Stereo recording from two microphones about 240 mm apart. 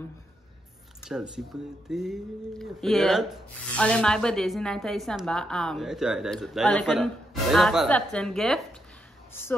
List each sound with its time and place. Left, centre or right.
1.0 s speech: centre